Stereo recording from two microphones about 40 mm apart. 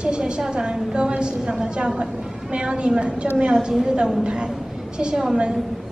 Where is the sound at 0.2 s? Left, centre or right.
Centre.